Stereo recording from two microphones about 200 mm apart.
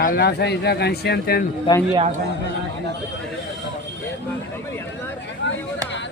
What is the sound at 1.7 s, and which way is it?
Speech, 25° left (ahead or behind).